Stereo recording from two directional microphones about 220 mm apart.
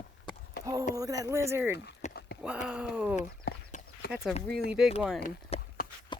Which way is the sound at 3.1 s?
35° left (ahead or behind).